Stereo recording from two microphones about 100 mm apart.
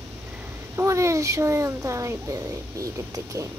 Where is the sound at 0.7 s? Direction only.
30° right (ahead or behind).